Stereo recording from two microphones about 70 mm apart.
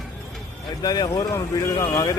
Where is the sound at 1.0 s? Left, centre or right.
Left.